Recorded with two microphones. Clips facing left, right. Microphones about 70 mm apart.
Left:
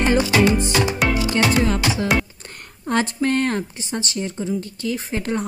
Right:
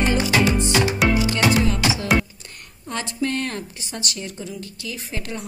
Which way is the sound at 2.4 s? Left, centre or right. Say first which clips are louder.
Left 7 dB; left.